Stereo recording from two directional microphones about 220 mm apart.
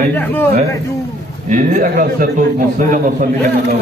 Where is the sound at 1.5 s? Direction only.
35° right (ahead or behind).